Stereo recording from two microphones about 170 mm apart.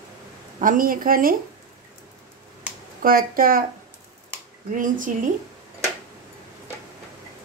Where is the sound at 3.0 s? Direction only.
55° right (ahead or behind).